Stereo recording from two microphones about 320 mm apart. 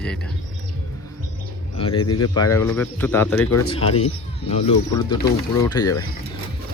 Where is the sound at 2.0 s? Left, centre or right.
Left.